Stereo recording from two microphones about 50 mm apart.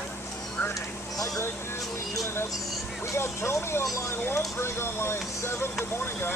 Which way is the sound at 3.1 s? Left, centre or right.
Left.